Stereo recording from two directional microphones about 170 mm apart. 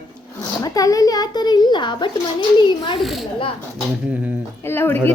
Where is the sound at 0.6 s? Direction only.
20° left (ahead or behind).